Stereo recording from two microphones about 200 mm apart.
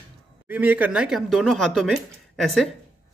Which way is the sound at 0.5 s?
10° right (ahead or behind).